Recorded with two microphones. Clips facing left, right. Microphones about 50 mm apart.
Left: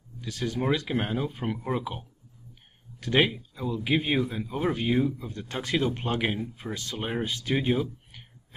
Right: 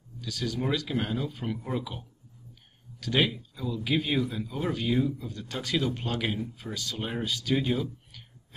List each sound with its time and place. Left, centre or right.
0.2 s speech: left